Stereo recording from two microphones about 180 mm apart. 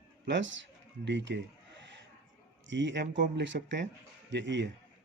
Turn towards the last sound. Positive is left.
turn(degrees=-80)